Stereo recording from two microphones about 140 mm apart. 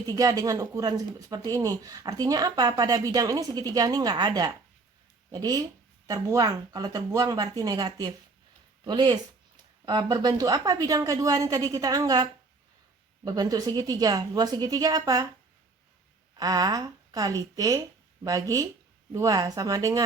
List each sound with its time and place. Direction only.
0.1 s speech: 25° right (ahead or behind)
16.4 s speech: 30° right (ahead or behind)